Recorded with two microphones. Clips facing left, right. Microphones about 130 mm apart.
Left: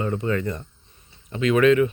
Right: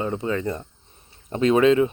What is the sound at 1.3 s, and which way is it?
Speech, 35° right (ahead or behind).